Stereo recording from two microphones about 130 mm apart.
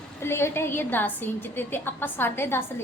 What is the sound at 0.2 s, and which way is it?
A woman's voice, 20° left (ahead or behind).